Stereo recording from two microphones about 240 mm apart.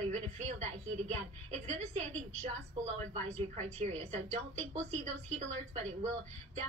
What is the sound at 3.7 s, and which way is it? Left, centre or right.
A woman's voice, right.